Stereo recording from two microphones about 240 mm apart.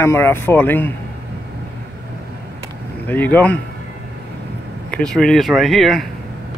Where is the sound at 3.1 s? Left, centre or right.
Centre.